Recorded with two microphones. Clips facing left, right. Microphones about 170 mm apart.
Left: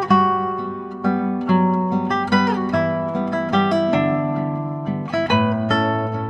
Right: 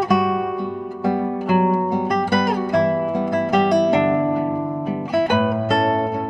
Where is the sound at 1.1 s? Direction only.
10° right (ahead or behind).